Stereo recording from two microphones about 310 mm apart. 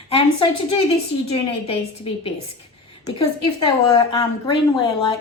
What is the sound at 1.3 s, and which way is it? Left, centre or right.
A woman's voice, centre.